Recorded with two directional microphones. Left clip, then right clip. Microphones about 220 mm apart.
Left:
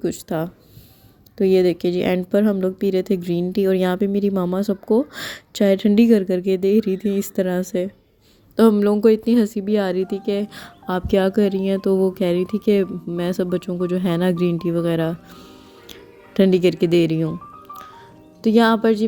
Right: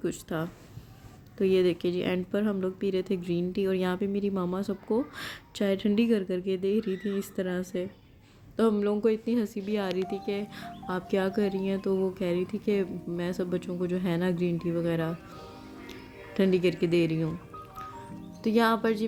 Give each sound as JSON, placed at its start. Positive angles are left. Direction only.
{"t": 0.0, "sound": "speech", "side_deg": 30}
{"t": 18.4, "sound": "speech", "side_deg": 35}